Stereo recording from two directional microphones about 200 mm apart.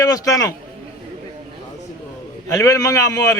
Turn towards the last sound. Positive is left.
turn(degrees=15)  # may be behind; listen again after turning